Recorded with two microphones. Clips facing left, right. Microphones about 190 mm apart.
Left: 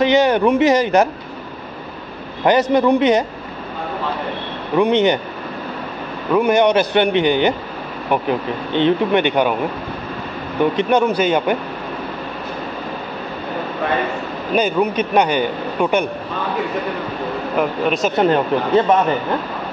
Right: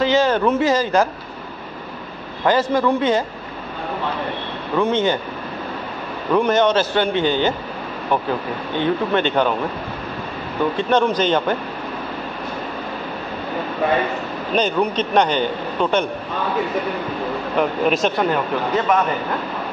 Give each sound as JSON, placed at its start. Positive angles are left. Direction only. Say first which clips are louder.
{"t": 0.0, "sound": "a man's voice", "louder": "left 3 dB", "side_deg": 15}
{"t": 2.4, "sound": "a man's voice", "louder": "left 3 dB", "side_deg": 20}
{"t": 4.7, "sound": "a man's voice", "louder": "left 4 dB", "side_deg": 15}
{"t": 6.3, "sound": "a man's voice", "louder": "left 2 dB", "side_deg": 10}
{"t": 10.6, "sound": "a man's voice", "louder": "left 2 dB", "side_deg": 15}
{"t": 14.5, "sound": "a man's voice", "louder": "left 2 dB", "side_deg": 10}
{"t": 17.6, "sound": "speech", "louder": "even", "side_deg": 0}
{"t": 18.1, "sound": "speech", "louder": "left 4 dB", "side_deg": 25}